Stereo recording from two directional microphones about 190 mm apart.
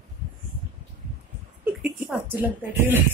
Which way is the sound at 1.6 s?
10° right (ahead or behind).